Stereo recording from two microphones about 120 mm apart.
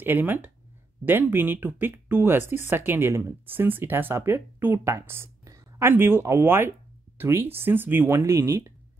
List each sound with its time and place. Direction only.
0.0 s speech: 15° right (ahead or behind)